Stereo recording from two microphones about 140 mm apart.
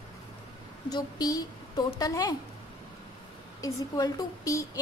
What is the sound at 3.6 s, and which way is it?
A woman's voice, 25° left (ahead or behind).